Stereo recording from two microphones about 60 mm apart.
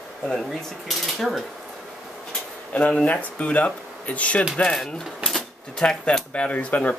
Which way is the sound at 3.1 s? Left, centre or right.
Left.